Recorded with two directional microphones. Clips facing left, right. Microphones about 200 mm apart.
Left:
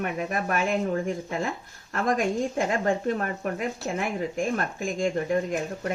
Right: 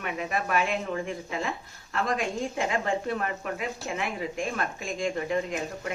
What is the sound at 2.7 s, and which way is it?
A woman's voice, 45° left (ahead or behind).